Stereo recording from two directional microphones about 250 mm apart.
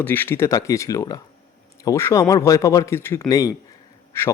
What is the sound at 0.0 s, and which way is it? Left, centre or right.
A man's voice, centre.